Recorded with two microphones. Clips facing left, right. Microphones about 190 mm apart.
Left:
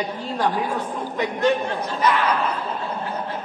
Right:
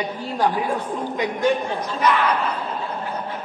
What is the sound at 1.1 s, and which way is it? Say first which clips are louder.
Speech: even; 15° right (ahead or behind).